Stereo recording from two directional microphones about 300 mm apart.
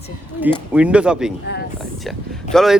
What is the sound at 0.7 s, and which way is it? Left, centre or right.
Speech, centre.